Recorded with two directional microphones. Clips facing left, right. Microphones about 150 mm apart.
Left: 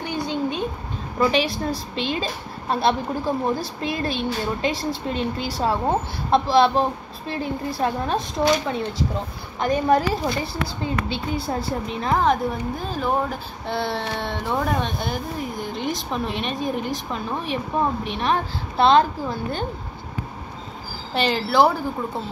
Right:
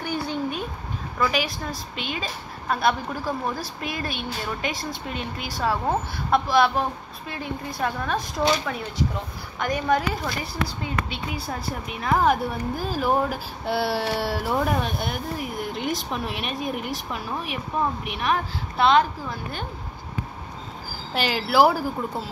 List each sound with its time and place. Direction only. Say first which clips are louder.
0.0 s a sound: left 2 dB; 20° left (ahead or behind)
1.1 s a woman's voice: left 5 dB; 30° left (ahead or behind)
9.6 s a woman's voice: left 4 dB; 30° left (ahead or behind)
12.2 s speech: left 1 dB; 5° right (ahead or behind)
16.6 s a woman's voice: left 4 dB; 30° left (ahead or behind)
16.9 s speech: left 3 dB; 5° right (ahead or behind)
18.0 s a woman's voice: left 2 dB; 30° left (ahead or behind)
21.1 s speech: left 2 dB; 5° right (ahead or behind)